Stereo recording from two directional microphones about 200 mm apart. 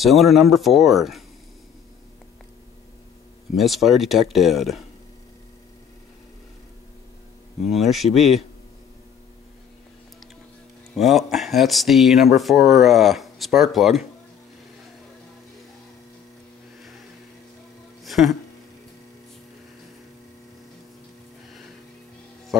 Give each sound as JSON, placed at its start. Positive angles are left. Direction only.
{"t": 0.0, "sound": "speech", "side_deg": 0}
{"t": 3.5, "sound": "speech", "side_deg": 0}
{"t": 7.7, "sound": "speech", "side_deg": 0}
{"t": 11.0, "sound": "speech", "side_deg": 0}
{"t": 18.0, "sound": "music", "side_deg": 0}